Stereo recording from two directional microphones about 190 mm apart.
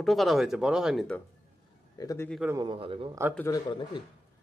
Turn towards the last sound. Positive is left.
turn(degrees=25)  # may be behind; listen again after turning